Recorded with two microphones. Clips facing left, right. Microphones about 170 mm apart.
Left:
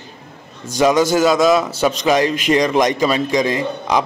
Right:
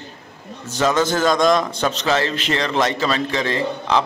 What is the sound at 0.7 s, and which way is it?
A man's voice, 10° left (ahead or behind).